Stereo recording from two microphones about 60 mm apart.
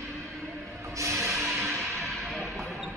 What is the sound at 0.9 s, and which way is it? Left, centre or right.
Music, right.